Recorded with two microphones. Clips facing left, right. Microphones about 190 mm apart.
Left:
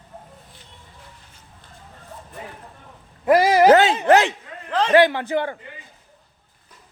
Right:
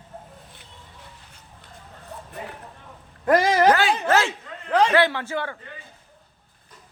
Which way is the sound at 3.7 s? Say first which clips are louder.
Left 6 dB; 20° left (ahead or behind).